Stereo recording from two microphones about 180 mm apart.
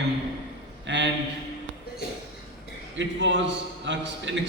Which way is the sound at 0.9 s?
80° right.